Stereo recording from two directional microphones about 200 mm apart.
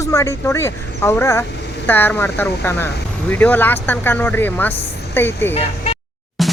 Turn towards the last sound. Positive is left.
turn(degrees=0)  # may be behind; listen again after turning